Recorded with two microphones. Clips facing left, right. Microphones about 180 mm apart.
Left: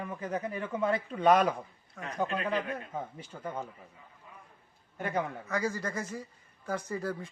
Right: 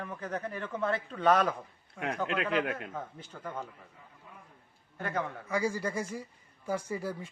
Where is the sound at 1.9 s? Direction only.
80° right.